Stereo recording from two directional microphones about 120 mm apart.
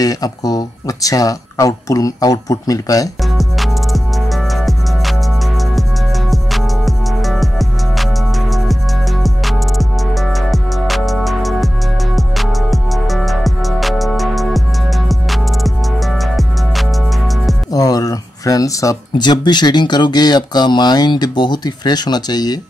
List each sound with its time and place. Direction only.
0.0 s speech: 30° left (ahead or behind)
3.3 s music: centre (ahead or behind)
17.7 s speech: 30° left (ahead or behind)